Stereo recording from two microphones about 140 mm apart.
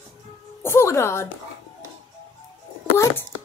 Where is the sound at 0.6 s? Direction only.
20° left (ahead or behind).